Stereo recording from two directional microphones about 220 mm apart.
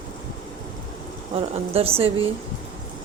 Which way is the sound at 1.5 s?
25° right (ahead or behind).